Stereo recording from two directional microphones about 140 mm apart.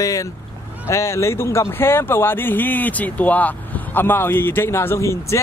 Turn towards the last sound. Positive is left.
turn(degrees=20)  # may be behind; listen again after turning